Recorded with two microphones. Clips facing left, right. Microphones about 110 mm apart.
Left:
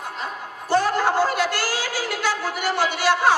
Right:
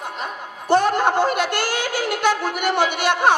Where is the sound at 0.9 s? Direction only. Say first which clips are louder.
Right 2 dB; 60° right (ahead or behind).